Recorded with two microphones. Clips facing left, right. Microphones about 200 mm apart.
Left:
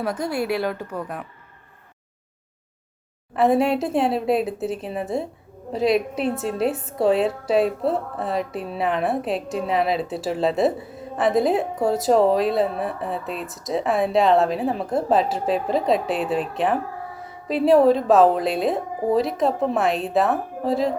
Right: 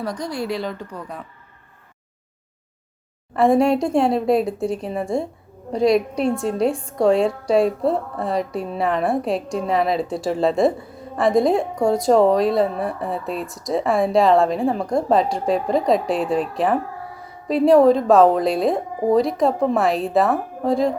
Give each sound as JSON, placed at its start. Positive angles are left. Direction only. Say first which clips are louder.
{"t": 0.0, "sound": "a woman's voice", "louder": "left 1 dB", "side_deg": 5}
{"t": 3.3, "sound": "a woman's voice", "louder": "right 3 dB", "side_deg": 5}